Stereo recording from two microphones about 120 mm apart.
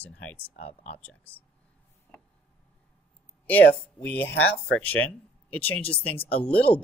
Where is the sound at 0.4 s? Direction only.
55° left (ahead or behind).